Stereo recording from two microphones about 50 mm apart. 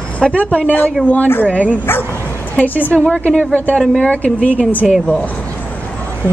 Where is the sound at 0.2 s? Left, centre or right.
Centre.